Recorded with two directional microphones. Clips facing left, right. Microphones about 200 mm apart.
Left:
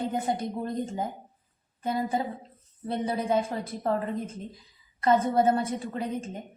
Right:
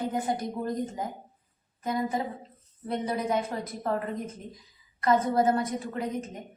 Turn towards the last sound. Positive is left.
turn(degrees=30)  # may be behind; listen again after turning